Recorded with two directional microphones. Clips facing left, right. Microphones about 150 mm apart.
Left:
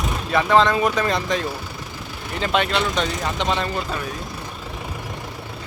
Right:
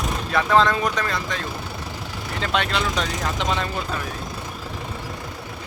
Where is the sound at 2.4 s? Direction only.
5° left (ahead or behind).